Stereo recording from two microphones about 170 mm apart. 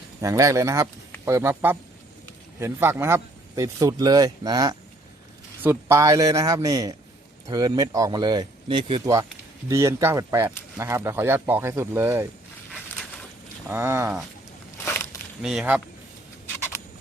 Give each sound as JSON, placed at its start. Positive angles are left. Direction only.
{"t": 0.2, "sound": "a man's voice", "side_deg": -20}
{"t": 9.6, "sound": "speech", "side_deg": -15}
{"t": 13.7, "sound": "speech", "side_deg": -15}
{"t": 14.8, "sound": "a sound", "side_deg": 15}
{"t": 15.4, "sound": "speech", "side_deg": -5}